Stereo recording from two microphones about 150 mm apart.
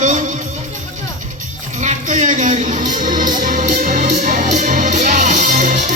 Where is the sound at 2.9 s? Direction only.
60° right (ahead or behind).